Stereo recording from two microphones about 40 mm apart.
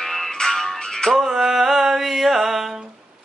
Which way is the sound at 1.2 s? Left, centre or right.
Centre.